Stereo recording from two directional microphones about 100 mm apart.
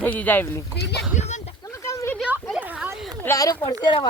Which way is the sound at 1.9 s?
30° left (ahead or behind).